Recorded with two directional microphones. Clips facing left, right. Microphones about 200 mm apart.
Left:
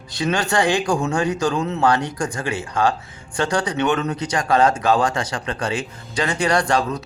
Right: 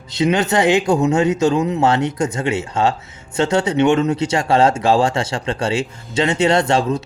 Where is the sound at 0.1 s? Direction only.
20° right (ahead or behind).